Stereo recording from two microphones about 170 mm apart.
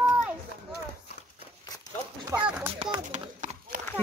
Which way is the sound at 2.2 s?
10° right (ahead or behind).